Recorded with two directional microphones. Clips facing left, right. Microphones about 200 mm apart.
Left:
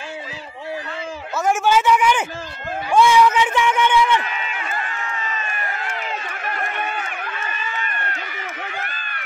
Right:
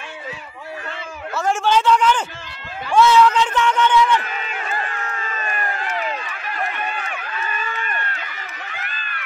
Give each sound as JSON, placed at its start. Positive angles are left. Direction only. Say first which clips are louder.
{"t": 1.4, "sound": "speech", "louder": "left 1 dB", "side_deg": 5}
{"t": 4.3, "sound": "crowd", "louder": "right 1 dB", "side_deg": -45}
{"t": 5.9, "sound": "run", "louder": "right 3 dB", "side_deg": 50}
{"t": 7.5, "sound": "run", "louder": "right 1 dB", "side_deg": -50}